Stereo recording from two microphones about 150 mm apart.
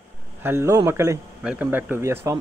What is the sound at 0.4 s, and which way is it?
Speech, 15° right (ahead or behind).